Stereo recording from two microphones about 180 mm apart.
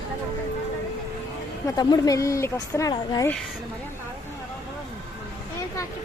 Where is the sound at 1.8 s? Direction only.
20° left (ahead or behind).